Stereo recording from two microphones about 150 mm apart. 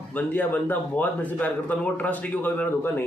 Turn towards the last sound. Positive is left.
turn(degrees=10)  # may be behind; listen again after turning